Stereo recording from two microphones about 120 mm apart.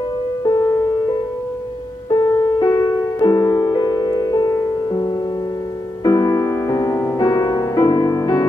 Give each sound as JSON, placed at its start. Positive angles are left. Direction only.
{"t": 2.0, "sound": "music", "side_deg": 30}